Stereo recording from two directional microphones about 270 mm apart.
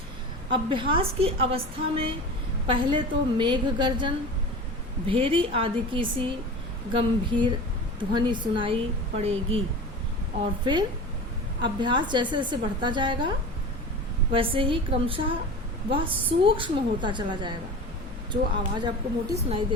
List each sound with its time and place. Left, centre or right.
0.5 s a woman's voice: centre
10.4 s a woman's voice: centre
14.3 s a woman's voice: centre